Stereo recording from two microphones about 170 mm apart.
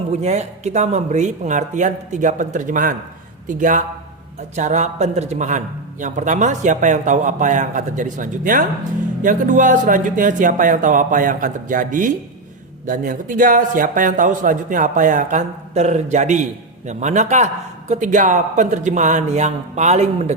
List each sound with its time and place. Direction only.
0.1 s a man's voice: 40° right (ahead or behind)